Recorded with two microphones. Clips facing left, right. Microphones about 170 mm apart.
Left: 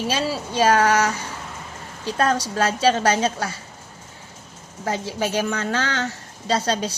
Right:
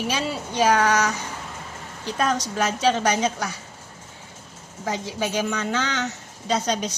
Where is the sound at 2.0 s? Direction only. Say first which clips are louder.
Left 3 dB; 20° right (ahead or behind).